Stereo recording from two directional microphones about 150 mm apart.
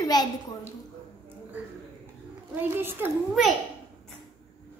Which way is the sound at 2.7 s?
15° right (ahead or behind).